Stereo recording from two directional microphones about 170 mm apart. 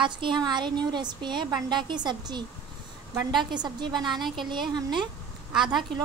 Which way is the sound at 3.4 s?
25° right (ahead or behind).